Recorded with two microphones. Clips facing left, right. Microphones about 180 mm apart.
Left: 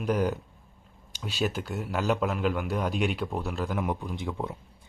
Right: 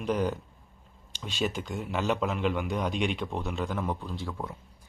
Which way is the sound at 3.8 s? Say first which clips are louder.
Left 2 dB; 15° left (ahead or behind).